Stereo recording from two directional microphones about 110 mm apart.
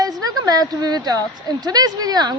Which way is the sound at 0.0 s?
35° right (ahead or behind).